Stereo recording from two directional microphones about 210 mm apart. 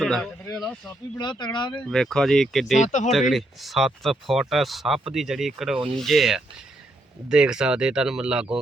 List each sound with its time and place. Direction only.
0.0 s speech: centre (ahead or behind)
1.2 s speech: 20° left (ahead or behind)
1.8 s speech: 5° left (ahead or behind)
2.7 s speech: 35° left (ahead or behind)
3.1 s speech: centre (ahead or behind)